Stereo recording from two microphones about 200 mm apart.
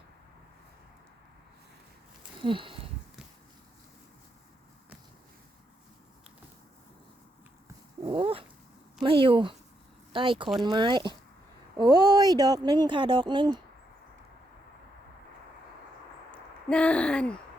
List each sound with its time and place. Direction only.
2.4 s speech: 25° right (ahead or behind)
8.0 s dog: 25° right (ahead or behind)
9.0 s speech: 25° right (ahead or behind)
10.5 s speech: centre (ahead or behind)
10.8 s speech: 20° right (ahead or behind)
16.3 s speech: 5° left (ahead or behind)